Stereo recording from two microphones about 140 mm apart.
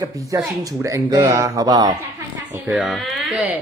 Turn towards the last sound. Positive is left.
turn(degrees=0)  # may be behind; listen again after turning